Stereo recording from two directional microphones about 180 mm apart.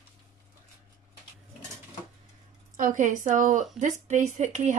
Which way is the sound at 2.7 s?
45° right (ahead or behind).